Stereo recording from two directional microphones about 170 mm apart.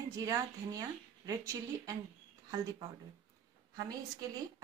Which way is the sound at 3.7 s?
20° right (ahead or behind).